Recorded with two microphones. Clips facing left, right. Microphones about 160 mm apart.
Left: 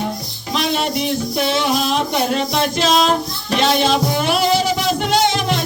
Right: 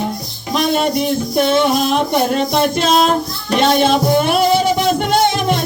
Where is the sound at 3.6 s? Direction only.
50° right (ahead or behind).